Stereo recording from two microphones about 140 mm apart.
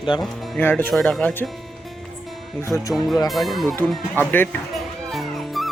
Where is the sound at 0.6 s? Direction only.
15° left (ahead or behind).